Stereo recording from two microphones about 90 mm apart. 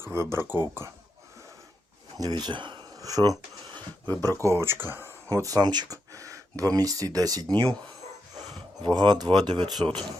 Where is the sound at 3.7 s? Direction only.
20° left (ahead or behind).